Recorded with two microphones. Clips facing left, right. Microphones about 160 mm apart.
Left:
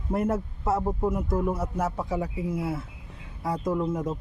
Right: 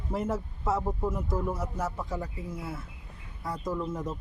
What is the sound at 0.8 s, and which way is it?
Speech, 15° left (ahead or behind).